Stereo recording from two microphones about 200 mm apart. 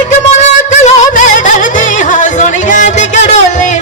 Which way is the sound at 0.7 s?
35° left (ahead or behind).